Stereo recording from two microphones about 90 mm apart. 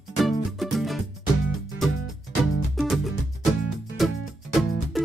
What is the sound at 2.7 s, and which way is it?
Music, centre (ahead or behind).